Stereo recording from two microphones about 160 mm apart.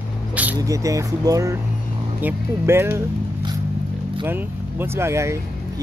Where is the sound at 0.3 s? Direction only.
10° right (ahead or behind).